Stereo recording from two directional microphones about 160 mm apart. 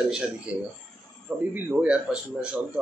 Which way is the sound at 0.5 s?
10° right (ahead or behind).